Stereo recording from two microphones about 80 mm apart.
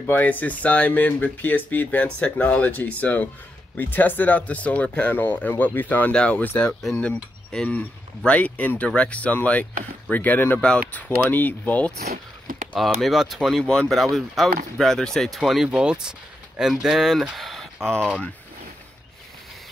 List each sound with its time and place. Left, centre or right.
0.0 s speech: left
6.6 s speech: centre
7.0 s speech: centre
12.7 s speech: centre